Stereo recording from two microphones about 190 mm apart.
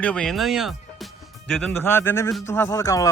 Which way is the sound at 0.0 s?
5° left (ahead or behind).